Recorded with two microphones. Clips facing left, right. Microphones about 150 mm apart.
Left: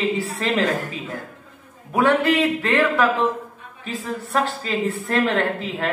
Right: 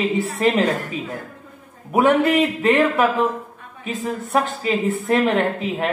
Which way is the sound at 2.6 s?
20° right (ahead or behind).